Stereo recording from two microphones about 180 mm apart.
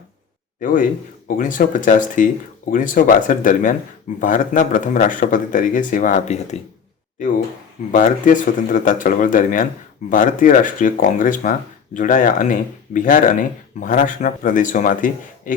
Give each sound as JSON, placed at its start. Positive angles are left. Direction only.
{"t": 0.6, "sound": "speech", "side_deg": 45}
{"t": 7.9, "sound": "speech", "side_deg": 45}